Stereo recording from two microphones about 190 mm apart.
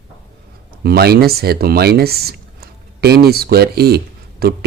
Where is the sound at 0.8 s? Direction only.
55° right (ahead or behind).